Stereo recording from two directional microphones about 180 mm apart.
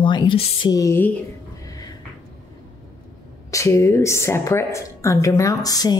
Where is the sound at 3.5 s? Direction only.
15° left (ahead or behind).